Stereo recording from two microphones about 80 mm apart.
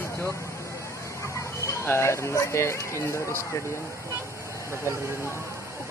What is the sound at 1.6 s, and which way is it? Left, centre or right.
Speech, left.